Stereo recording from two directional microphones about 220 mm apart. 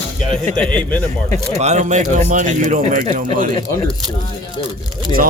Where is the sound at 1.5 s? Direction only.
30° right (ahead or behind).